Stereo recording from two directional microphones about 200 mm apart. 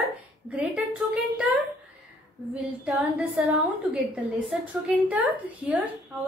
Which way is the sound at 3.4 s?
5° right (ahead or behind).